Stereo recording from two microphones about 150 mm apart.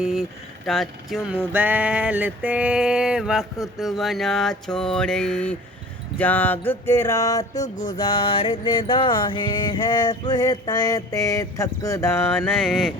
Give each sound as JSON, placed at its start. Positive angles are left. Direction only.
{"t": 0.0, "sound": "speech", "side_deg": 0}
{"t": 1.4, "sound": "a sound", "side_deg": -10}
{"t": 3.8, "sound": "mantra", "side_deg": 0}
{"t": 6.1, "sound": "speech", "side_deg": 10}
{"t": 6.7, "sound": "mantra", "side_deg": 15}
{"t": 7.6, "sound": "music", "side_deg": 55}
{"t": 7.9, "sound": "mantra", "side_deg": 30}
{"t": 12.6, "sound": "mantra", "side_deg": 0}